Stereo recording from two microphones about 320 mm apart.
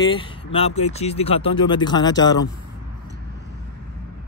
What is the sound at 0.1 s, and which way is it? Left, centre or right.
Speech, centre.